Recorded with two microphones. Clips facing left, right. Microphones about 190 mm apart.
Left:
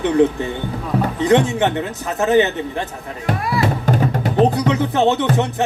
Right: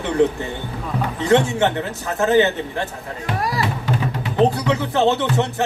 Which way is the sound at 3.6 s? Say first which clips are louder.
Left 5 dB; 45° left (ahead or behind).